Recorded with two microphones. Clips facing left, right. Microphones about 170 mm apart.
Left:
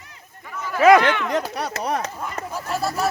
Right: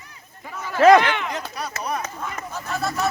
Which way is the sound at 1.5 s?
80° left.